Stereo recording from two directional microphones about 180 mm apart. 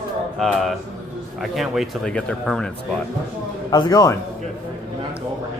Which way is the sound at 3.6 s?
25° left (ahead or behind).